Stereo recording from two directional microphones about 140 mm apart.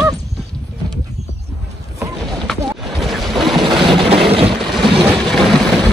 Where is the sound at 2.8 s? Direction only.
Centre (ahead or behind).